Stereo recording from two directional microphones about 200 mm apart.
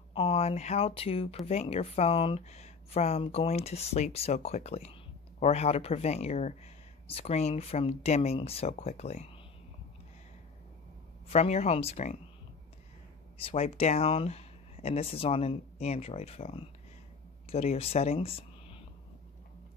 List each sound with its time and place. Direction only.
0.1 s a woman's voice: 30° left (ahead or behind)
11.2 s a woman's voice: 30° left (ahead or behind)
13.4 s a woman's voice: 30° left (ahead or behind)